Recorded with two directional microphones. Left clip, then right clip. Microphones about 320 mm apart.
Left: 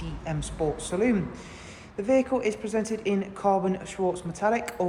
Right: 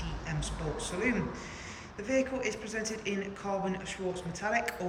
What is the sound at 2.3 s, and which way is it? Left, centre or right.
A woman's voice, centre.